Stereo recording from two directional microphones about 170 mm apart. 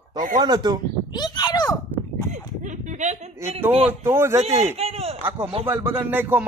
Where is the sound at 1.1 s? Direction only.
25° left (ahead or behind).